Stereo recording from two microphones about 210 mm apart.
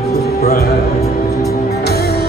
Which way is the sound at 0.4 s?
45° left (ahead or behind).